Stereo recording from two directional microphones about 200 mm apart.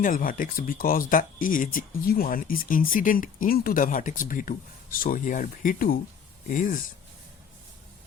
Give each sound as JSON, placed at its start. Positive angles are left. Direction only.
{"t": 0.0, "sound": "speech", "side_deg": 45}